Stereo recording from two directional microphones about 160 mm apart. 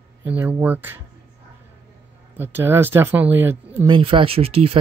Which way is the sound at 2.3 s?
15° right (ahead or behind).